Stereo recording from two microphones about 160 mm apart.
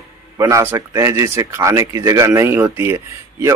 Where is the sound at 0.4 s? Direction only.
20° right (ahead or behind).